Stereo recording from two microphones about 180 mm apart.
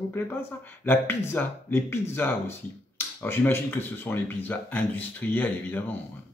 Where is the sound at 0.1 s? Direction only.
15° left (ahead or behind).